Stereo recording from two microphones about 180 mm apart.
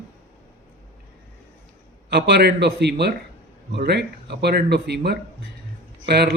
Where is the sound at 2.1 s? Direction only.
65° right (ahead or behind).